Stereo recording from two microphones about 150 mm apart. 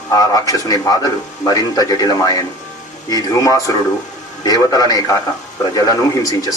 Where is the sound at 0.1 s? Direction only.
25° left (ahead or behind).